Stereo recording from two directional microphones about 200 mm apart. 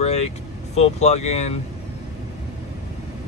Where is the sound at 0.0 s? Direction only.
30° left (ahead or behind).